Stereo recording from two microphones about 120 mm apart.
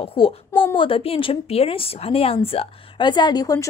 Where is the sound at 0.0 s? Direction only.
50° left (ahead or behind).